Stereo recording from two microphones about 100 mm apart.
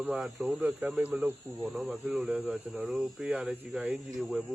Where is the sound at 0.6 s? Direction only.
20° right (ahead or behind).